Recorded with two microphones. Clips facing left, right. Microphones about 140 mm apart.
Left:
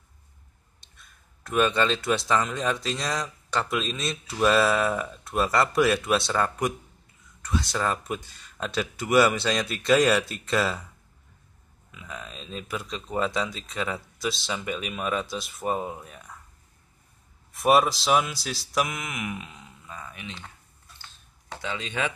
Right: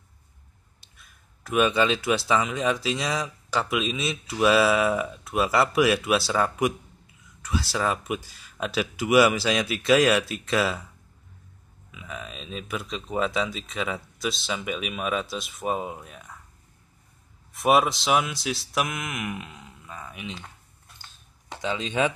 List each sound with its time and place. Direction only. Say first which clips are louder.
0.7 s speech: left 1 dB; 5° right (ahead or behind)
11.9 s speech: right 2 dB; centre (ahead or behind)
17.5 s speech: even; centre (ahead or behind)
21.5 s speech: right 5 dB; 20° right (ahead or behind)